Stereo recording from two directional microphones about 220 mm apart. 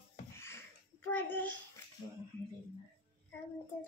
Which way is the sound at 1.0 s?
10° left (ahead or behind).